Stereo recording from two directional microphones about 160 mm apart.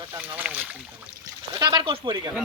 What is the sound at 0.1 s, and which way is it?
Speech, 10° right (ahead or behind).